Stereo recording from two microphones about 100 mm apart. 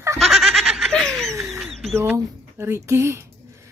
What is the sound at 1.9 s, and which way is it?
Speech, 25° right (ahead or behind).